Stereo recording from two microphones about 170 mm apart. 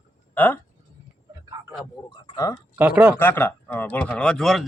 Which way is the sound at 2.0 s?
25° left (ahead or behind).